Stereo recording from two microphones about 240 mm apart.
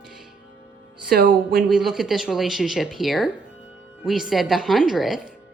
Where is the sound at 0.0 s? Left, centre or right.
Centre.